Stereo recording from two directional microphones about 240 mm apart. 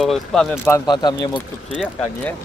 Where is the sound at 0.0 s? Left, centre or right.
Centre.